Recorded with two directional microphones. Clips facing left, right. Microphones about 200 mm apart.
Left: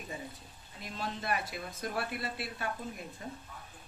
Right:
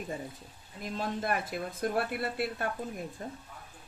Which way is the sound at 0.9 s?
50° right (ahead or behind).